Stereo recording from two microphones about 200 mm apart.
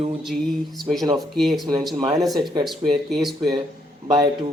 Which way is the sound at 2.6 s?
Centre (ahead or behind).